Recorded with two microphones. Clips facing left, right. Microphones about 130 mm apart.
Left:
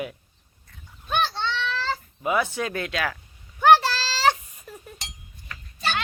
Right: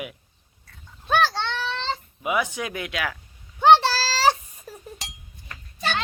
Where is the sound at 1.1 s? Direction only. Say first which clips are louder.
Right 3 dB; 90° right.